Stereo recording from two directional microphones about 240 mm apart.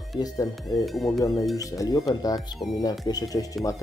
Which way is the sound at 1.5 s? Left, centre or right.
Centre.